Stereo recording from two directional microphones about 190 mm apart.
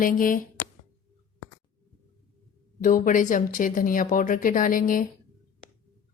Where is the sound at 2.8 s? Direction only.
45° left (ahead or behind).